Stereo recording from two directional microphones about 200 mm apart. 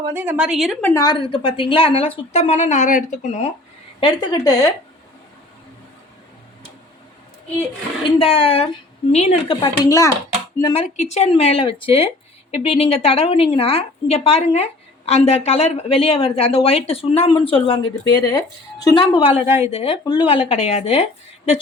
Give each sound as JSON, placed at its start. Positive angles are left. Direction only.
{"t": 0.1, "sound": "a woman's voice", "side_deg": -10}
{"t": 0.9, "sound": "a woman's voice", "side_deg": 20}
{"t": 4.0, "sound": "a woman's voice", "side_deg": 20}
{"t": 8.2, "sound": "a woman's voice", "side_deg": 30}
{"t": 9.6, "sound": "a woman's voice", "side_deg": 15}